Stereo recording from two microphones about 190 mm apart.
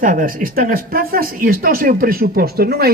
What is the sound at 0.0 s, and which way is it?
Speech, 45° right (ahead or behind).